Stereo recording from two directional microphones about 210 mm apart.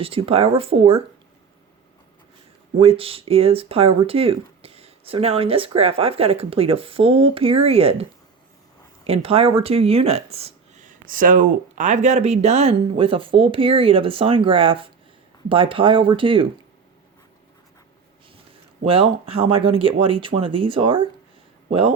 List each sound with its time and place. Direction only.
0.0 s speech: 25° right (ahead or behind)
2.7 s speech: 25° right (ahead or behind)
9.0 s speech: 30° right (ahead or behind)
18.9 s speech: 25° right (ahead or behind)